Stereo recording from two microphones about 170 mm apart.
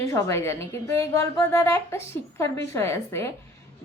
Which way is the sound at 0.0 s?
15° left (ahead or behind).